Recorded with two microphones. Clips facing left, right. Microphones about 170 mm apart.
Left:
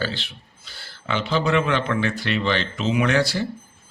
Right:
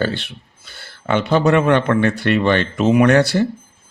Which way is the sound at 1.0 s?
50° right (ahead or behind).